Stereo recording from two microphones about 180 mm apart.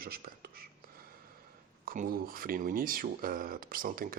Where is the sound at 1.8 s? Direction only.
50° right (ahead or behind).